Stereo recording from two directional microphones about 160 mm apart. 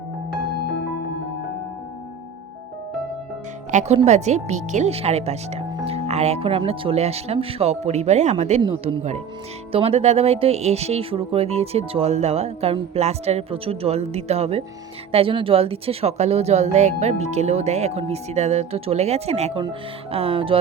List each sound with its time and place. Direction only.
3.7 s speech: 45° right (ahead or behind)